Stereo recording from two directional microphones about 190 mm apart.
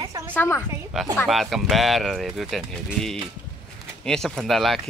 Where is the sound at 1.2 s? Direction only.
Centre (ahead or behind).